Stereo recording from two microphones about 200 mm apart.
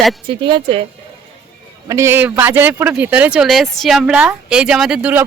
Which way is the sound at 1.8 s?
15° right (ahead or behind).